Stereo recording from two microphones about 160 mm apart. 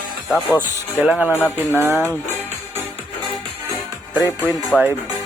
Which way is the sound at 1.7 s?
15° right (ahead or behind).